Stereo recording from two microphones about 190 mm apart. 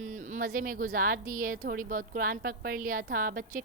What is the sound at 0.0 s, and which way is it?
A woman's voice, 40° right (ahead or behind).